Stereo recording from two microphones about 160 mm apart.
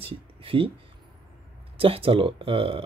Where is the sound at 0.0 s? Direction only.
35° right (ahead or behind).